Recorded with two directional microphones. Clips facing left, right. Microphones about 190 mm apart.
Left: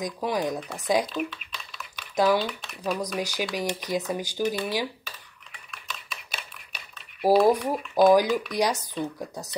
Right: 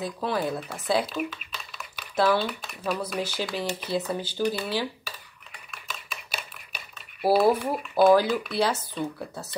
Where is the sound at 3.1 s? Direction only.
15° left (ahead or behind).